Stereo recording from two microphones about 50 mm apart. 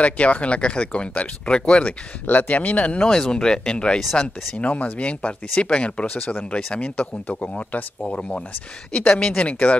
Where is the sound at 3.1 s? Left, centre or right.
Centre.